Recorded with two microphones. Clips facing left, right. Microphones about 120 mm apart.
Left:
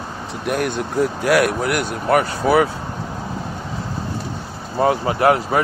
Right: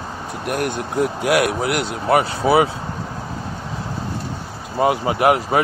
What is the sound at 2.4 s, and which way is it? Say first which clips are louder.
Speech: even; 15° right (ahead or behind).